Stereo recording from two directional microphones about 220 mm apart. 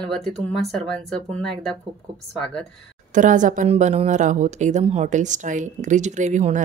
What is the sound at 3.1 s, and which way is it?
A woman's voice, 35° right (ahead or behind).